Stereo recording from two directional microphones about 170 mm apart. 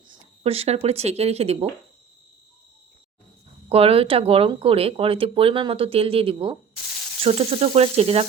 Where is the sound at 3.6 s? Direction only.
35° right (ahead or behind).